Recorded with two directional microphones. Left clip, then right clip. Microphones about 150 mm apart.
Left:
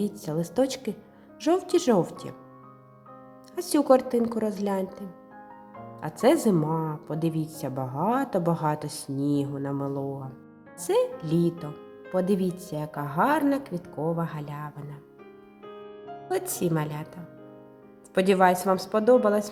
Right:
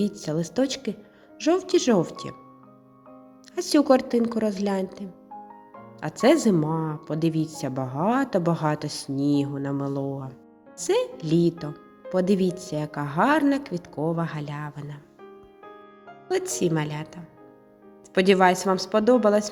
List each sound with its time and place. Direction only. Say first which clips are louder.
0.0 s a woman's voice: right 3 dB; 5° right (ahead or behind)
3.5 s a woman's voice: right 1 dB; 5° right (ahead or behind)
6.0 s a woman's voice: right 2 dB; 10° right (ahead or behind)
16.3 s a woman's voice: right 3 dB; 5° right (ahead or behind)
18.1 s a woman's voice: right 2 dB; 5° right (ahead or behind)